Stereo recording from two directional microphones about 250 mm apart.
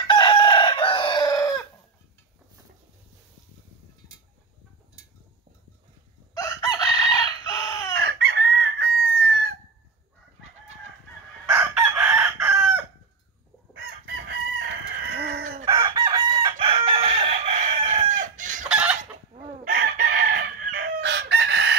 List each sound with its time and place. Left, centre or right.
0.1 s chicken: centre
6.3 s chicken: centre
8.2 s chicken: right
11.4 s chicken: centre
13.8 s chicken: right
15.6 s chicken: centre
18.7 s chicken: centre
19.7 s chicken: right